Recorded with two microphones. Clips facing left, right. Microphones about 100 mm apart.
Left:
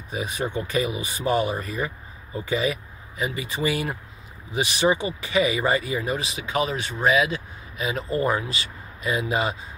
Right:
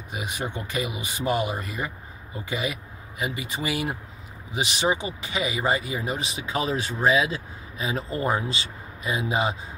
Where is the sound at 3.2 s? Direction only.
15° right (ahead or behind).